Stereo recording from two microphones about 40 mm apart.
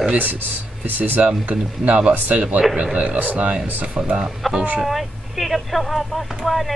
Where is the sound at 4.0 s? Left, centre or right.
Right.